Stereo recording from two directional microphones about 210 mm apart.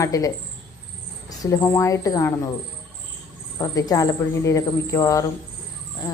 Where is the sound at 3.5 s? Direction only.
15° left (ahead or behind).